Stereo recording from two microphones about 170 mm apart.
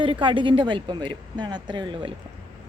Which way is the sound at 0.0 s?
30° right (ahead or behind).